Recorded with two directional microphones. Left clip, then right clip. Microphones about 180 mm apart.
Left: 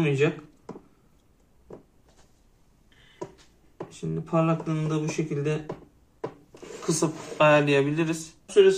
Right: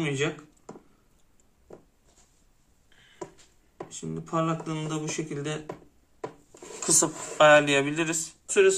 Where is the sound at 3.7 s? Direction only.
10° right (ahead or behind).